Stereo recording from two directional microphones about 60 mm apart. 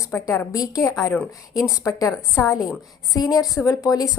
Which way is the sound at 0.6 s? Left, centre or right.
Left.